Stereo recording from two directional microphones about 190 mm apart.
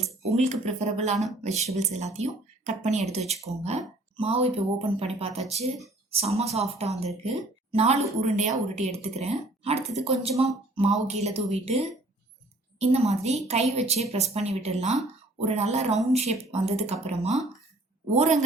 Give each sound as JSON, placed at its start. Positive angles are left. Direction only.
{"t": 0.0, "sound": "speech", "side_deg": -35}
{"t": 12.8, "sound": "speech", "side_deg": -35}